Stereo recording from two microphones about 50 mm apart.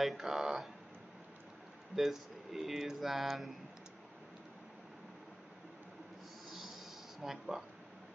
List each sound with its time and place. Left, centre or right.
0.0 s speech: centre
2.0 s speech: centre
6.5 s a sound: centre
7.2 s speech: centre